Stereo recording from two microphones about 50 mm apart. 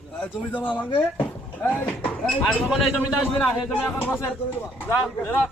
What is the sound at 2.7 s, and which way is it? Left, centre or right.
Speech, centre.